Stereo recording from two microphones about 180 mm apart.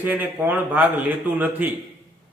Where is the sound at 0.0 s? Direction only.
10° right (ahead or behind).